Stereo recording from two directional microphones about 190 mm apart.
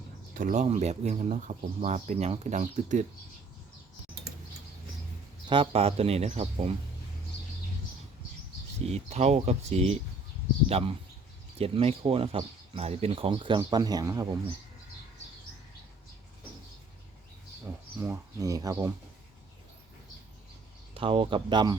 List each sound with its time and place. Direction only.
0.3 s speech: 45° right (ahead or behind)
5.5 s speech: 30° right (ahead or behind)
8.9 s speech: 35° right (ahead or behind); by 14.3 s 20° right (ahead or behind)
18.0 s speech: 15° right (ahead or behind)
20.9 s speech: 30° right (ahead or behind)